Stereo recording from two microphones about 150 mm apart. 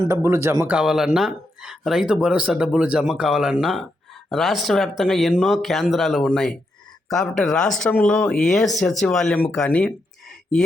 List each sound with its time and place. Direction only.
0.1 s speech: 15° right (ahead or behind)
0.8 s speech: 5° right (ahead or behind)